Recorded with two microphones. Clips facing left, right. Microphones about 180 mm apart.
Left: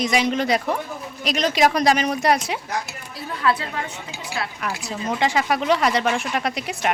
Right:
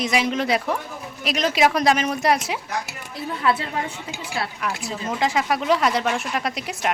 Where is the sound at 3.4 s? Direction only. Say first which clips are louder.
Even; 25° right (ahead or behind).